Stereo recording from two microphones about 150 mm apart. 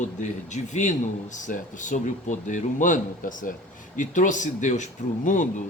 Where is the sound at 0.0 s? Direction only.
55° left (ahead or behind).